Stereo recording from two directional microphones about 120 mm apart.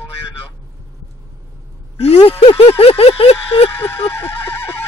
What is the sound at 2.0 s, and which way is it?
A man's voice, 55° left (ahead or behind).